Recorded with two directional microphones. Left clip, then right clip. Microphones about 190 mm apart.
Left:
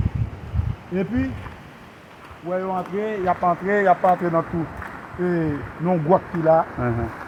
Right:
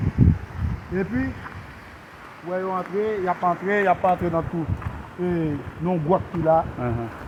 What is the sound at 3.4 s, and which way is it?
Speech, 45° left (ahead or behind).